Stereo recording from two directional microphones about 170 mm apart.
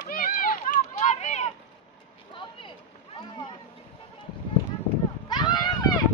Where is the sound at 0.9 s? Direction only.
40° left (ahead or behind).